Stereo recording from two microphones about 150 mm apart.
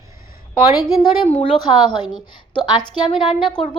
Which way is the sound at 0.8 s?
25° left (ahead or behind).